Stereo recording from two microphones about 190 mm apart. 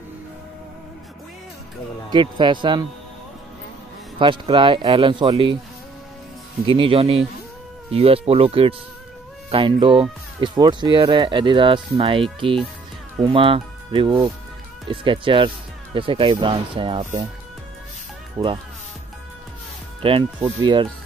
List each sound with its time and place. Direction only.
2.0 s speech: 25° right (ahead or behind)
4.2 s speech: 25° right (ahead or behind)
6.6 s speech: 30° right (ahead or behind)
18.4 s speech: 20° right (ahead or behind)
20.0 s speech: 30° right (ahead or behind)